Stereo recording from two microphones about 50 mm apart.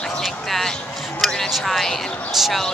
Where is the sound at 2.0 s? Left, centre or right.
Left.